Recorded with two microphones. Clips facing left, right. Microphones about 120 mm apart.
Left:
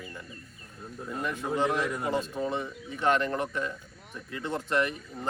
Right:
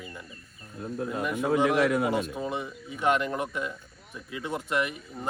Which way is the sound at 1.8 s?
90° right.